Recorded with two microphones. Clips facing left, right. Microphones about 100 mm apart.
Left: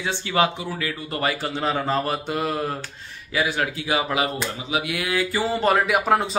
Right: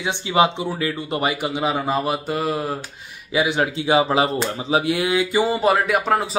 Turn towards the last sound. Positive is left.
turn(degrees=0)  # may be behind; listen again after turning